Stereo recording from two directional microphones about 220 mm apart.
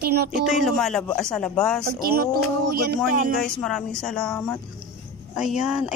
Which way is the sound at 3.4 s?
Centre (ahead or behind).